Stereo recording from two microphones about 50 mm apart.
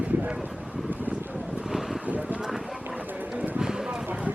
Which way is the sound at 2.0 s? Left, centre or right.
Right.